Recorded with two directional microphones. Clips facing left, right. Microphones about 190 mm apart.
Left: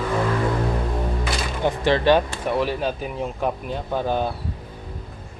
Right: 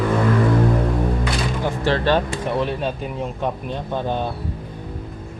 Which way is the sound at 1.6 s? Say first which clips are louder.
Left 3 dB; 15° left (ahead or behind).